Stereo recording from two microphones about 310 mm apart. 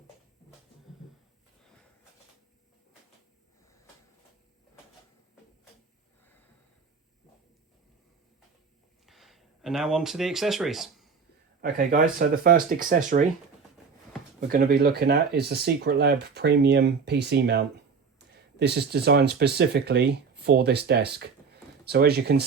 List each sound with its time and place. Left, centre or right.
9.0 s a sound: centre
11.6 s speech: right
14.4 s speech: right